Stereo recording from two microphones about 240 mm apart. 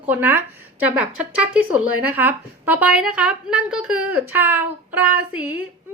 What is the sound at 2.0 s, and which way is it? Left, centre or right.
A woman's voice, centre.